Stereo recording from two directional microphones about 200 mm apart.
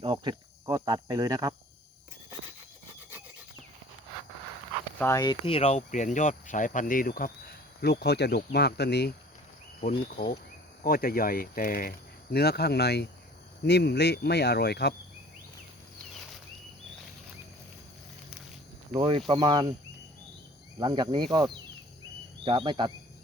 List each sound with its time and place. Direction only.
0.0 s speech: 20° right (ahead or behind)
4.9 s speech: 15° left (ahead or behind); by 9.1 s 55° left (ahead or behind)
10.8 s speech: 45° left (ahead or behind)
18.9 s speech: 25° right (ahead or behind)
20.7 s speech: 20° right (ahead or behind)